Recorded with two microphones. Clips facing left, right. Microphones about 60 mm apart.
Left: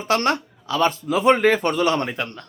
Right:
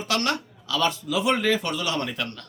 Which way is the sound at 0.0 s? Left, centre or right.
Left.